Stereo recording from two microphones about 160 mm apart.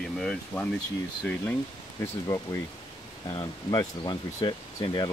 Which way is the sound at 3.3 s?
25° left (ahead or behind).